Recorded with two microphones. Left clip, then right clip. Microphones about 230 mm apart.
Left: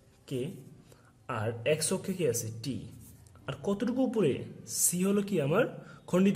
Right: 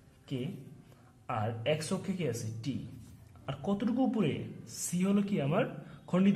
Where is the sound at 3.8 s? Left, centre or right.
Left.